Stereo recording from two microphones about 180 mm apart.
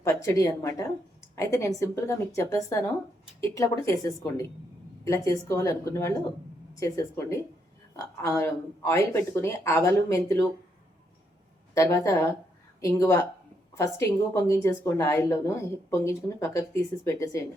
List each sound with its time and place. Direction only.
0.0 s a woman's voice: 15° left (ahead or behind)
11.7 s a woman's voice: 15° left (ahead or behind)